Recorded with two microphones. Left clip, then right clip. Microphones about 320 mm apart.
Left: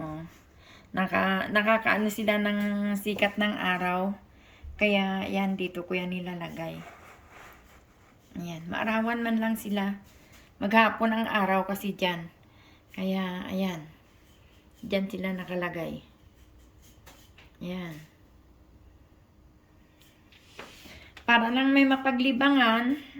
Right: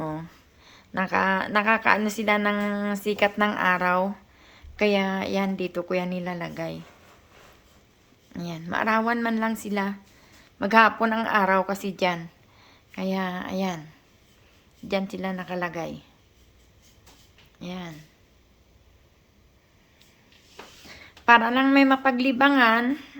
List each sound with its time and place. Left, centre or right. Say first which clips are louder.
0.0 s speech: right 6 dB; centre
8.3 s a woman's voice: right 5 dB; centre
14.8 s speech: right 2 dB; centre
17.6 s speech: right 1 dB; centre
20.9 s a woman's voice: right 6 dB; centre